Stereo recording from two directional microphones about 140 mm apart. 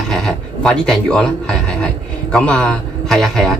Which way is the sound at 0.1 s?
5° left (ahead or behind).